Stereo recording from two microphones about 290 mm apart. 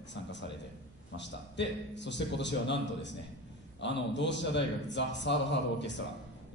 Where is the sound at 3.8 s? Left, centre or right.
Left.